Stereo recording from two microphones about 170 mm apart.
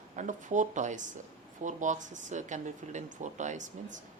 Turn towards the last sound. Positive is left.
turn(degrees=-45)  # may be behind; listen again after turning